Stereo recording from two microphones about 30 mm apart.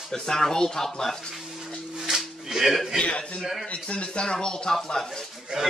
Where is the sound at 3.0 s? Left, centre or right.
Left.